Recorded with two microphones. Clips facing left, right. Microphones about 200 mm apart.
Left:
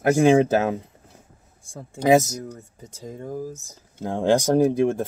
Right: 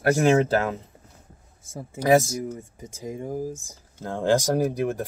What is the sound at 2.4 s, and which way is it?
Speech, 10° right (ahead or behind).